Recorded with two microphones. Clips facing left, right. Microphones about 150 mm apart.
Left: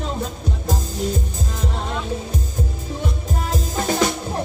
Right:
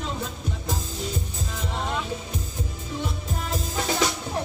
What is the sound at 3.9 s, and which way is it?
Music, 50° left (ahead or behind).